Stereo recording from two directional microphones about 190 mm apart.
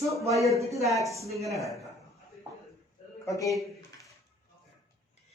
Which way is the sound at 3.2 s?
15° left (ahead or behind).